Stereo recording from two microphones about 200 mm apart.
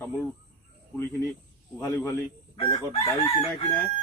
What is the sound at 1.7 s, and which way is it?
Speech, 15° left (ahead or behind).